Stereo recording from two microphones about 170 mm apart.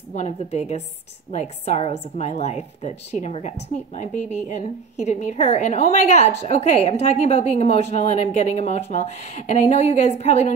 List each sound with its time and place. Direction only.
0.1 s a woman's voice: 40° left (ahead or behind)